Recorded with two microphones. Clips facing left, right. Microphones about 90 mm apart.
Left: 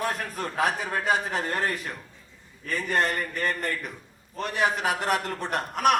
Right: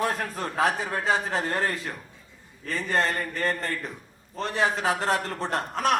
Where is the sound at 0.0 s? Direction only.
30° right (ahead or behind).